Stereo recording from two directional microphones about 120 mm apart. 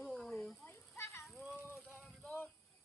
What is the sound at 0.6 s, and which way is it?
Children playing, 20° left (ahead or behind).